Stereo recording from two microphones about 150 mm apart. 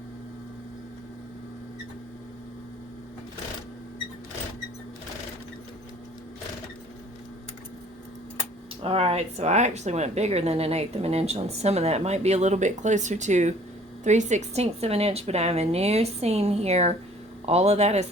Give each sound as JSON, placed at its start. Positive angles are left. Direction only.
{"t": 8.8, "sound": "speech", "side_deg": -40}